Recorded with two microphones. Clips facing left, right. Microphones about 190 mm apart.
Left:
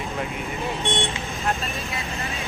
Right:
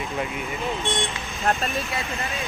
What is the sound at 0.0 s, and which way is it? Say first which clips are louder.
Speech: right 1 dB; centre (ahead or behind).